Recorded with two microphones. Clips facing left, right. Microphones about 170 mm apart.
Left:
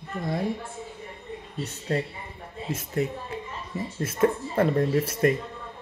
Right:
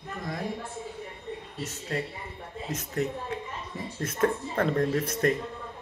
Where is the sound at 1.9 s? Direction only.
35° left (ahead or behind).